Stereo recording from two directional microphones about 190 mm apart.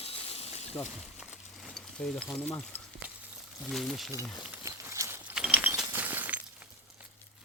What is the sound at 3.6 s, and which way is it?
Speech, centre (ahead or behind).